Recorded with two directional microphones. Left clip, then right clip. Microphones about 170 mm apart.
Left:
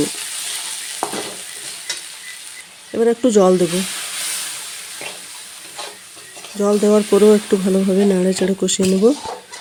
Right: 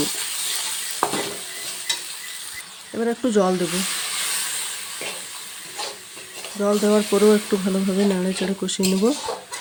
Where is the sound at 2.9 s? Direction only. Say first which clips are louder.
Left 7 dB; 15° left (ahead or behind).